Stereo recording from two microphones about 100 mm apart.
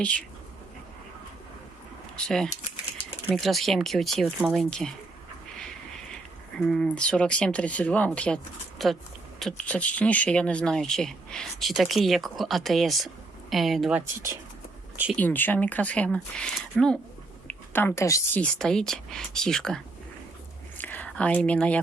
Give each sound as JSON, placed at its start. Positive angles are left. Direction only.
{"t": 0.0, "sound": "speech", "side_deg": 15}
{"t": 2.1, "sound": "speech", "side_deg": 5}
{"t": 6.6, "sound": "speech", "side_deg": 5}
{"t": 8.8, "sound": "speech", "side_deg": 0}
{"t": 15.1, "sound": "speech", "side_deg": 20}
{"t": 17.5, "sound": "a sound", "side_deg": 20}
{"t": 18.3, "sound": "speech", "side_deg": 10}
{"t": 20.7, "sound": "a sound", "side_deg": 15}